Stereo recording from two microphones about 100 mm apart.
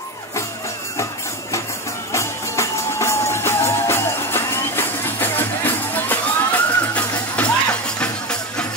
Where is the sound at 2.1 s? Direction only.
30° left (ahead or behind); by 8.6 s 10° left (ahead or behind).